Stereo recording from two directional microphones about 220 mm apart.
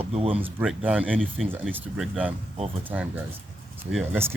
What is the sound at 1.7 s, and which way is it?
Speech, 5° right (ahead or behind).